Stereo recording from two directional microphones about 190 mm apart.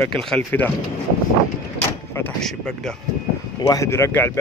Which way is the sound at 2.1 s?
5° left (ahead or behind).